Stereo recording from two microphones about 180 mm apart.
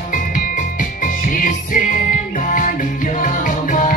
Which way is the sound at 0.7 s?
45° left (ahead or behind).